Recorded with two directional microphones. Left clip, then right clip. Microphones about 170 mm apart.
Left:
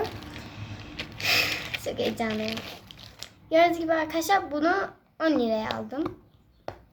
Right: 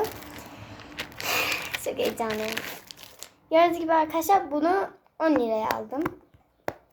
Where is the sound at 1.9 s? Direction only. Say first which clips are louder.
Right 1 dB; 10° right (ahead or behind).